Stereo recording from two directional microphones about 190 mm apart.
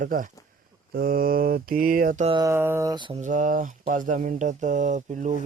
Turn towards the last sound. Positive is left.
turn(degrees=-40)  # may be behind; listen again after turning